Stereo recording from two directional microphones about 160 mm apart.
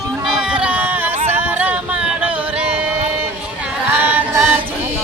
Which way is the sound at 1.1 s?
40° right (ahead or behind).